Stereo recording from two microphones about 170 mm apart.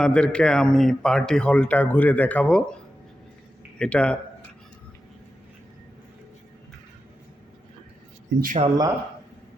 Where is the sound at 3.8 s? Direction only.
5° left (ahead or behind).